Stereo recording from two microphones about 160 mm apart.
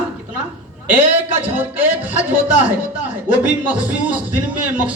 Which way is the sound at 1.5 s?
10° right (ahead or behind).